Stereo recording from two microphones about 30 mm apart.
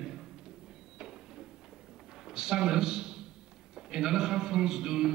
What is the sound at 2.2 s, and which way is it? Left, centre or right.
A man's voice, centre.